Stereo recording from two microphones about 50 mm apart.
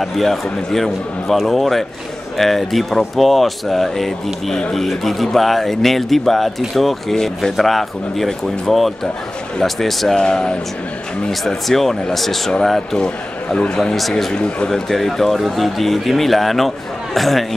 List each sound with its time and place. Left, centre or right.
0.0 s a man's voice: centre
11.2 s a man's voice: centre
13.0 s a man's voice: centre
13.9 s speech: centre
14.3 s speech: centre
14.7 s speech: centre